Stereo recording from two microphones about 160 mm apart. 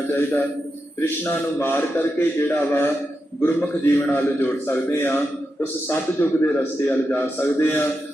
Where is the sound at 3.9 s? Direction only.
15° left (ahead or behind).